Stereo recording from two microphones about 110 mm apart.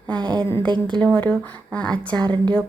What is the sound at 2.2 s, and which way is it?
Speech, 45° right (ahead or behind).